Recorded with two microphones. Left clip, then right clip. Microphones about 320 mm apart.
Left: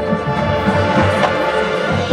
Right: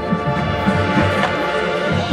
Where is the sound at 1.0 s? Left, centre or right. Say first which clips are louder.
Left 3 dB; centre.